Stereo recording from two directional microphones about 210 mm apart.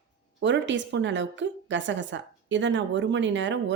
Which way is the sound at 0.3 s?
60° right (ahead or behind).